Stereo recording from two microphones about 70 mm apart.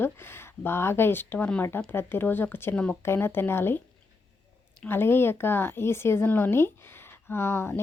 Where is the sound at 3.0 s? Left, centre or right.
Left.